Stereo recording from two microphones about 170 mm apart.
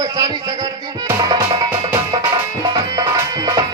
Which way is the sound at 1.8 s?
25° right (ahead or behind).